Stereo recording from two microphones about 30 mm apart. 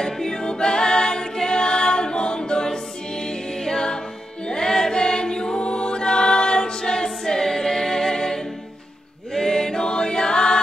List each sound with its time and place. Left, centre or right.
0.0 s a capella: centre
4.5 s music: left
9.3 s chant: centre